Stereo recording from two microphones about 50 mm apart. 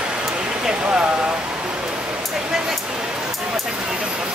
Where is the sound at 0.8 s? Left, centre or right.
Right.